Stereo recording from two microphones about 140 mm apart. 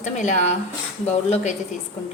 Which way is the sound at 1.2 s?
45° left (ahead or behind).